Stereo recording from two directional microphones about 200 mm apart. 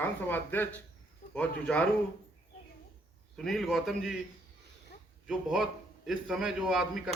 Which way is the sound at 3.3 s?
Centre (ahead or behind).